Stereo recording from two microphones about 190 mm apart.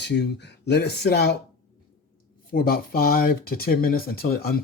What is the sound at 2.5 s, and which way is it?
Speech, 50° left (ahead or behind).